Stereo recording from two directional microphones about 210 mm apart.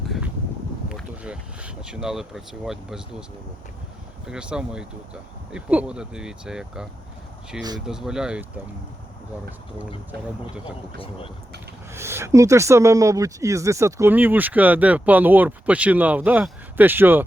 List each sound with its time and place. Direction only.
0.9 s speech: 5° right (ahead or behind)
4.3 s speech: 5° right (ahead or behind)
10.9 s speech: 25° left (ahead or behind)
11.9 s speech: 10° right (ahead or behind)